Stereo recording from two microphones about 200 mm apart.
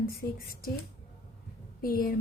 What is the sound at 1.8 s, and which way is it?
Speech, 45° left (ahead or behind).